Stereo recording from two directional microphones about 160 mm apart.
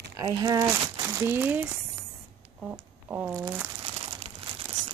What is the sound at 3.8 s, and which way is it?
Crumpling, 40° right (ahead or behind).